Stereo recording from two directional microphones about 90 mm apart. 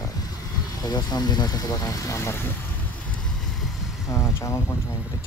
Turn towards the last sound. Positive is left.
turn(degrees=30)  # may be behind; listen again after turning